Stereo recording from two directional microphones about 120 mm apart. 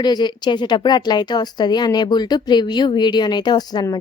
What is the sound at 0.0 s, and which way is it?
A woman's voice, 35° left (ahead or behind).